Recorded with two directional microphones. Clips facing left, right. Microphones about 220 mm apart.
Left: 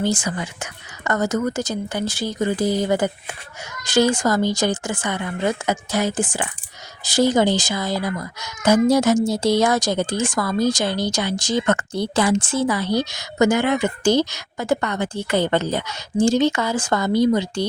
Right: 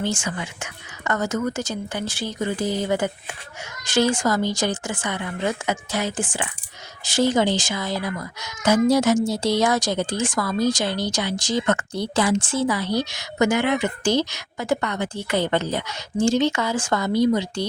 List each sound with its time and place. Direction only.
0.0 s speech: 35° left (ahead or behind)